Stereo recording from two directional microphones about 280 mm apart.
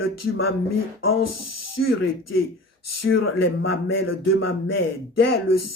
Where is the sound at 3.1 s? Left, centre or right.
Left.